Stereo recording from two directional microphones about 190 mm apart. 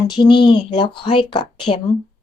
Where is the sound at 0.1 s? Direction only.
25° left (ahead or behind).